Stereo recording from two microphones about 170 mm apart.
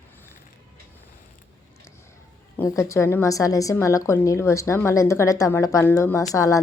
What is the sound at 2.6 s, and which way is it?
A woman's voice, 20° left (ahead or behind).